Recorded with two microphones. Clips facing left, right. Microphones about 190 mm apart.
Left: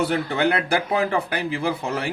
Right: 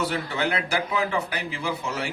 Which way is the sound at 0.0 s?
55° left (ahead or behind).